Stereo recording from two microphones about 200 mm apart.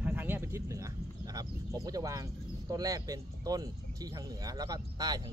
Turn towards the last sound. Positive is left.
turn(degrees=-20)  # may be behind; listen again after turning